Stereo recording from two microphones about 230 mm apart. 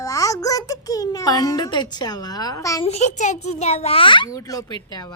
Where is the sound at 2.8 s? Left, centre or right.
Left.